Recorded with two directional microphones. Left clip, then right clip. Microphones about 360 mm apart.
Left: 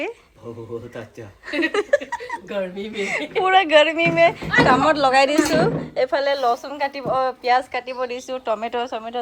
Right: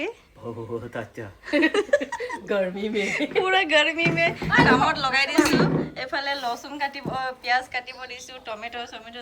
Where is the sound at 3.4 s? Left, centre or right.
Centre.